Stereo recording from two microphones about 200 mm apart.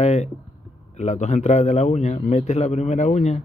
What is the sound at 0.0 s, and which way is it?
A man's voice, 35° left (ahead or behind).